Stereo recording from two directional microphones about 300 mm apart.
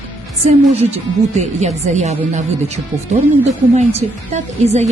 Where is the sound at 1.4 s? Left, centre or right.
Right.